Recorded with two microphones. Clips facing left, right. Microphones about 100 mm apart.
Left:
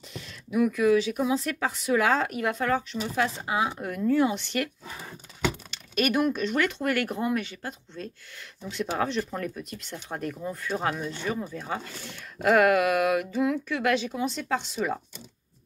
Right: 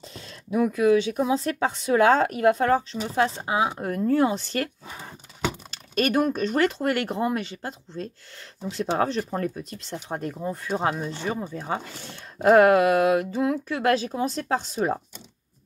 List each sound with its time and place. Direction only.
0.1 s speech: 30° right (ahead or behind)
4.8 s a sound: 20° right (ahead or behind)
5.7 s speech: 35° right (ahead or behind)